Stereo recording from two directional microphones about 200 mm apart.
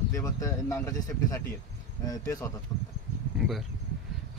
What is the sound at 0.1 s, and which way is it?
Speech, 15° left (ahead or behind).